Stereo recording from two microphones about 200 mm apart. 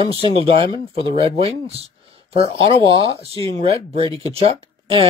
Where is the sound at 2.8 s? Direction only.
15° left (ahead or behind).